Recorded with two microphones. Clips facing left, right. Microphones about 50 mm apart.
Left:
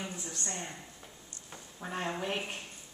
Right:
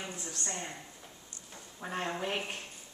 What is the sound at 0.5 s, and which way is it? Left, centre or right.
Speech, centre.